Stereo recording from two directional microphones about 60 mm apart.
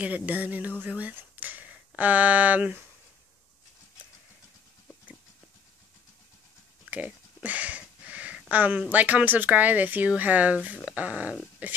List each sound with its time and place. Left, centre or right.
0.0 s speech: right
0.8 s a sound: right
2.0 s speech: right
6.9 s speech: right
7.4 s a sound: right
8.9 s speech: right